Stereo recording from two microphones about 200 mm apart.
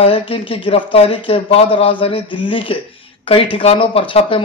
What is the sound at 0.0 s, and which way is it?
Speech, 30° left (ahead or behind).